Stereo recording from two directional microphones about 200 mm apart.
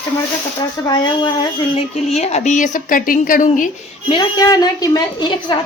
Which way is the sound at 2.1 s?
35° left (ahead or behind).